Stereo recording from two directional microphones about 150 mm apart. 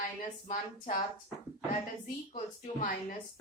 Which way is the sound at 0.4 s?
55° left (ahead or behind).